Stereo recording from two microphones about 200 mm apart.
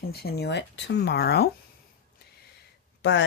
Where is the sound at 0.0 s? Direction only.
50° left (ahead or behind).